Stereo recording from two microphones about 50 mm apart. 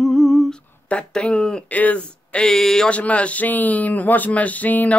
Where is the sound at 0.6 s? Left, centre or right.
Left.